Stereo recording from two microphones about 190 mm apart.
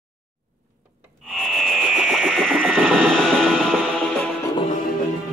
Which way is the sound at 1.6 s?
Centre (ahead or behind).